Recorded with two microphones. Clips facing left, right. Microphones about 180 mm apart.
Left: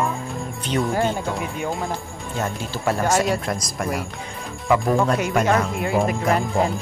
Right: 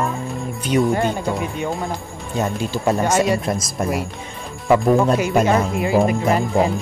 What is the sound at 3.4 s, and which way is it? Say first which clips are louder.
Speech: right 4 dB; 20° right (ahead or behind).